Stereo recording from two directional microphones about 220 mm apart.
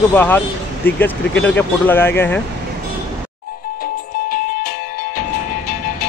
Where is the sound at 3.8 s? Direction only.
40° left (ahead or behind).